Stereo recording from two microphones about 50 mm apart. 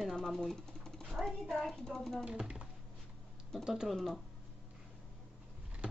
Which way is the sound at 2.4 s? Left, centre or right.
Centre.